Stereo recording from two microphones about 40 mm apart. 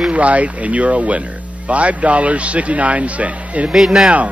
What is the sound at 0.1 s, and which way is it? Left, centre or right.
A man's voice, right.